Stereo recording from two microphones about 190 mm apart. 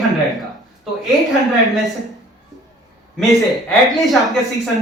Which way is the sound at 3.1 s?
Centre (ahead or behind).